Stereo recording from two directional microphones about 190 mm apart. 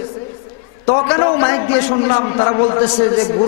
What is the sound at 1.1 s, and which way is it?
A man's voice, 15° left (ahead or behind).